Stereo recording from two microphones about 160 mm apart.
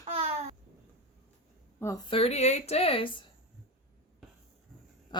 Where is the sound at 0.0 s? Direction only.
40° right (ahead or behind).